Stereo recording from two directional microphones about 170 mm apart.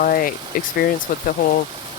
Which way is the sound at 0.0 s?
60° left (ahead or behind).